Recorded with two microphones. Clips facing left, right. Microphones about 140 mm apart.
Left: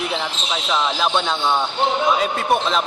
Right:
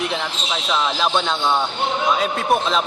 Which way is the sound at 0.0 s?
Centre (ahead or behind).